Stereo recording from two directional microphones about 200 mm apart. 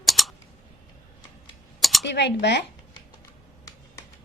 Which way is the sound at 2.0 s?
55° left (ahead or behind).